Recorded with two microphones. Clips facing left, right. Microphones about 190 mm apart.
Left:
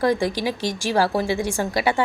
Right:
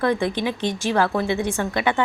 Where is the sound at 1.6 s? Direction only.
35° left (ahead or behind).